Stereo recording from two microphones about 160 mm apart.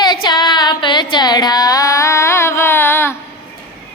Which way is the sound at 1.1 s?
25° left (ahead or behind).